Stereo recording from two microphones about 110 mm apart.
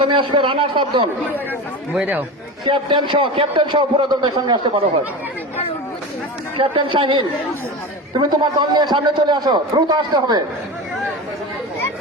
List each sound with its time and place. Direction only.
0.0 s a man's voice: 50° right (ahead or behind)
1.9 s speech: 15° right (ahead or behind)
2.6 s a man's voice: 45° right (ahead or behind)
6.6 s a man's voice: 50° right (ahead or behind)